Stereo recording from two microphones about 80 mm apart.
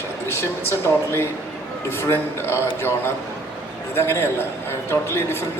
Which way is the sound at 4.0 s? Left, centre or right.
Left.